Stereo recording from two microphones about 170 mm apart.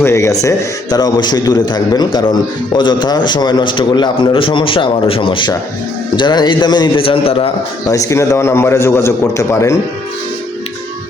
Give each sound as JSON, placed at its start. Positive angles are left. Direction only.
{"t": 0.0, "sound": "a man's voice", "side_deg": 15}
{"t": 7.9, "sound": "a man's voice", "side_deg": 20}